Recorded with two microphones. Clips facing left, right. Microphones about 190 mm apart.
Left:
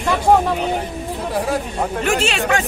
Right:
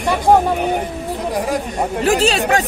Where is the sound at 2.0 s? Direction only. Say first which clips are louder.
Right 5 dB; 35° right (ahead or behind).